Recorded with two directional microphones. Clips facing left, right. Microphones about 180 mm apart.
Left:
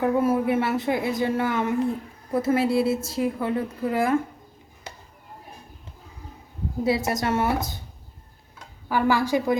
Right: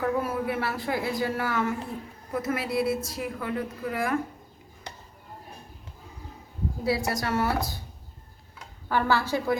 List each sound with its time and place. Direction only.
0.0 s a woman's voice: 25° left (ahead or behind)
6.8 s a woman's voice: 20° left (ahead or behind)
8.9 s a woman's voice: 15° left (ahead or behind)